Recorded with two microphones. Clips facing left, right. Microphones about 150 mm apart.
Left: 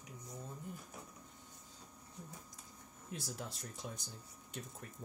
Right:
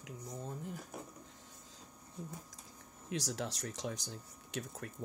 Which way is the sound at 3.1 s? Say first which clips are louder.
Right 7 dB; 90° right.